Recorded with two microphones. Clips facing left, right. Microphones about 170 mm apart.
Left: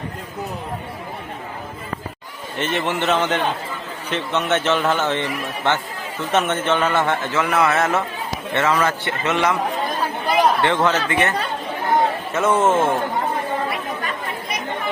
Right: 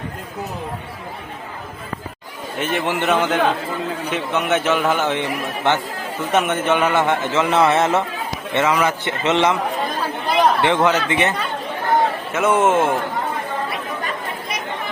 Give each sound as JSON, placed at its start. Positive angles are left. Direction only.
{"t": 2.6, "sound": "a man's voice", "side_deg": -10}
{"t": 10.6, "sound": "speech", "side_deg": -15}
{"t": 12.3, "sound": "speech", "side_deg": -5}